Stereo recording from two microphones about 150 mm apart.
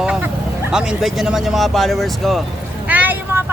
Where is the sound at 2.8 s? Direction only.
10° right (ahead or behind).